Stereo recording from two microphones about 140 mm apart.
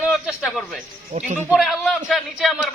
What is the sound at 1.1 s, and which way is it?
Speech, 60° right (ahead or behind).